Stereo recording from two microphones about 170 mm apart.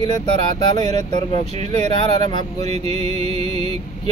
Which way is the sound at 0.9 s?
25° left (ahead or behind).